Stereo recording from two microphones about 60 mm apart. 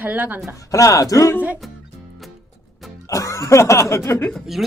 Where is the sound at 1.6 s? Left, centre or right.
Centre.